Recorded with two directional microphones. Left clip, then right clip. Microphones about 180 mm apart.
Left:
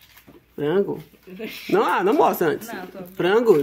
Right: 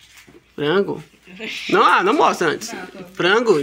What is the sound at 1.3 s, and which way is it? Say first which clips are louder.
Speech: right 6 dB; 70° left (ahead or behind).